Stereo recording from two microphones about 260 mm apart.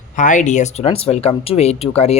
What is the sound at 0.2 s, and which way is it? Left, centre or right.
Speech, left.